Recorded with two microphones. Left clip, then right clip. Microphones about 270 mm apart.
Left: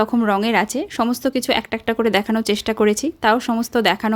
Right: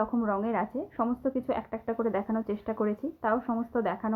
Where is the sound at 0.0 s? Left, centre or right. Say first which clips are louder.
Left 11 dB; left.